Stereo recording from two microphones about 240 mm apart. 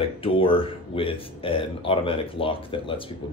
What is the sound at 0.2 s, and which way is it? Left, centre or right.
Speech, left.